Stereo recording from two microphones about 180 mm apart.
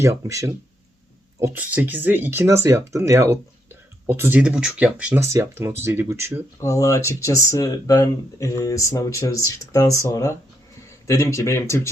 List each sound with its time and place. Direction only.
0.0 s speech: 15° right (ahead or behind)
6.6 s speech: 15° left (ahead or behind)